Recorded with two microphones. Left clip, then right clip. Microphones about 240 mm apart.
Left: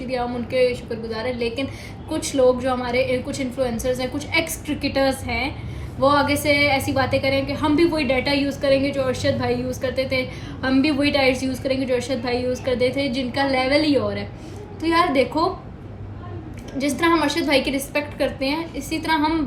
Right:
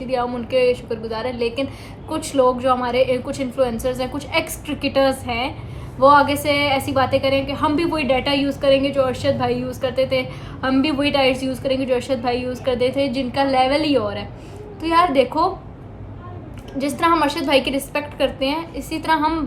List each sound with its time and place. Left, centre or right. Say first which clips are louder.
0.1 s a woman's voice: right 4 dB; centre
16.7 s a woman's voice: right 2 dB; centre